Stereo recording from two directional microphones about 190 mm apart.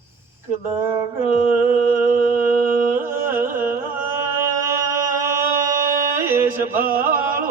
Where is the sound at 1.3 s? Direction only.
45° right (ahead or behind).